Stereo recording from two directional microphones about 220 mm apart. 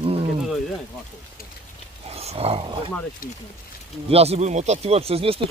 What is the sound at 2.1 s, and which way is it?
Speech, 25° right (ahead or behind).